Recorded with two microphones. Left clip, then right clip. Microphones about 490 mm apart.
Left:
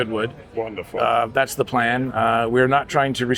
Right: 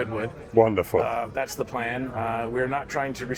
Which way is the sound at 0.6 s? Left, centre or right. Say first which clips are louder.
Right 8 dB; right.